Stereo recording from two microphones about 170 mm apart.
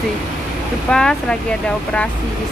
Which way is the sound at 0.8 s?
5° left (ahead or behind).